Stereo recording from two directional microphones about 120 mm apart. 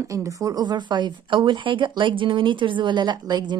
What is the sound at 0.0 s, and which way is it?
A woman's voice, 25° right (ahead or behind).